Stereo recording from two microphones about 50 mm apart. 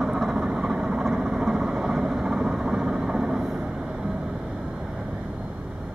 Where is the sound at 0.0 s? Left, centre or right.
Centre.